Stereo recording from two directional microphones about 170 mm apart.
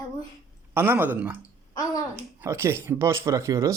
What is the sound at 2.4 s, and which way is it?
Speech, 15° right (ahead or behind).